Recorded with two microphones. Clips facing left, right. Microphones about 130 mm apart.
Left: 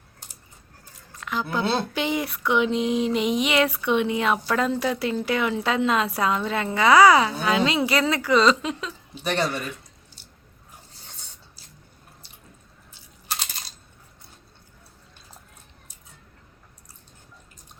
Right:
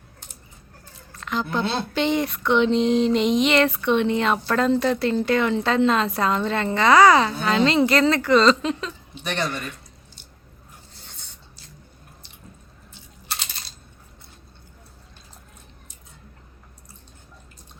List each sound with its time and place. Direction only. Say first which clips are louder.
1.1 s a sound: right 2 dB; 10° left (ahead or behind)
9.2 s speech: left 2 dB; 35° left (ahead or behind)
9.5 s speech: left 1 dB; 5° left (ahead or behind)